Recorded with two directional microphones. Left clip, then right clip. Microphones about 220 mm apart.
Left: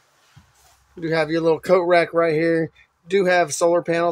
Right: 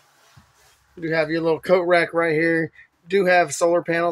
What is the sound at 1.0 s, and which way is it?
Speech, 10° left (ahead or behind).